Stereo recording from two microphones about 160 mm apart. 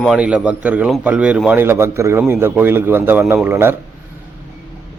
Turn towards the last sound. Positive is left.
turn(degrees=-15)  # may be behind; listen again after turning